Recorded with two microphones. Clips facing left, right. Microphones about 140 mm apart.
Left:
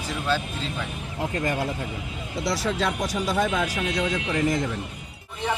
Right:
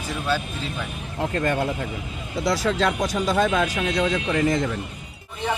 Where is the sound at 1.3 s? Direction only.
65° right (ahead or behind).